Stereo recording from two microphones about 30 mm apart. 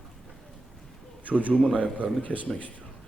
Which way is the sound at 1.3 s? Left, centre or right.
Left.